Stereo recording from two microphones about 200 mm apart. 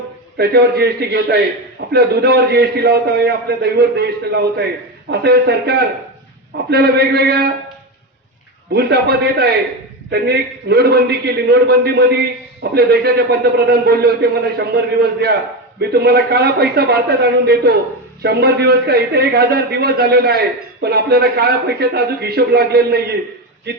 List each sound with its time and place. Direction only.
0.3 s a man's voice: 55° right (ahead or behind)
8.7 s a man's voice: 55° right (ahead or behind)
15.8 s a man's voice: 55° right (ahead or behind)